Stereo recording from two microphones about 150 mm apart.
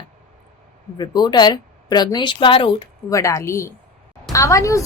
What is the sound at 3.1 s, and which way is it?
Speech, 20° left (ahead or behind).